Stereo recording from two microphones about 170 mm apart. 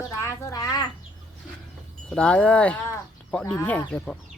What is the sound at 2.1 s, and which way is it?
Speech, 5° left (ahead or behind).